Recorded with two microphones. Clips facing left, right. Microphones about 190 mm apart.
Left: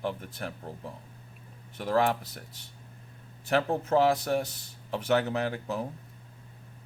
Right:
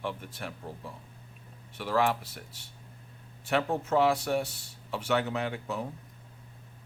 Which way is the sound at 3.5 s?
35° left (ahead or behind).